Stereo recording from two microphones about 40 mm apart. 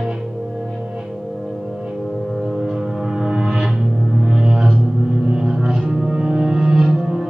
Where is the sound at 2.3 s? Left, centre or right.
Centre.